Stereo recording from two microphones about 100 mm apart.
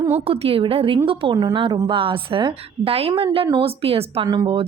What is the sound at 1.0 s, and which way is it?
A woman's voice, 55° right (ahead or behind).